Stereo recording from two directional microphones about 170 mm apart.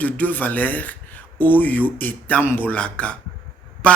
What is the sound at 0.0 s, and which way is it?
Speech, 10° left (ahead or behind).